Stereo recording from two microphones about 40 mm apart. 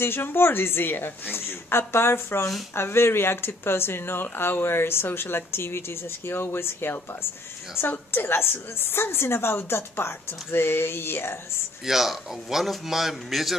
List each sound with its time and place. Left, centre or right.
0.0 s speech: left
1.3 s a woman's voice: left
11.8 s a man's voice: centre